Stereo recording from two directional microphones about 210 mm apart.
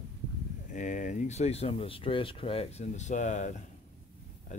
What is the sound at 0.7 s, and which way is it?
Speech, 35° left (ahead or behind).